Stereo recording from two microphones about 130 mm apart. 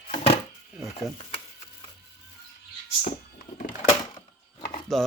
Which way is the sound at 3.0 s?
85° left.